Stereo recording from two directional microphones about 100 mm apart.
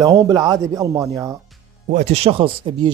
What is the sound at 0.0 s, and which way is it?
Speech, 35° right (ahead or behind).